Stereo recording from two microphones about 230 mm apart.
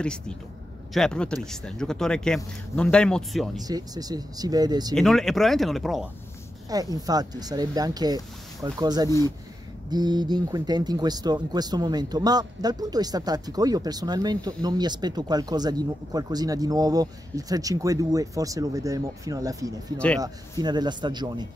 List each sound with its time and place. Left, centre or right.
0.9 s speech: centre
3.6 s speech: centre
4.9 s speech: centre
6.7 s a man's voice: centre